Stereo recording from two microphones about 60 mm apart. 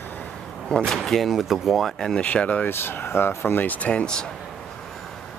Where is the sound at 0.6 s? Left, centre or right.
Centre.